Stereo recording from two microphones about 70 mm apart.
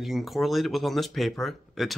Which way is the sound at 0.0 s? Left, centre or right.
Centre.